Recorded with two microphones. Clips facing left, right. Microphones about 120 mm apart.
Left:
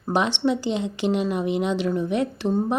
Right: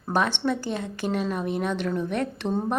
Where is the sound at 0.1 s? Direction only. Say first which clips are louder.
Left 3 dB; 15° left (ahead or behind).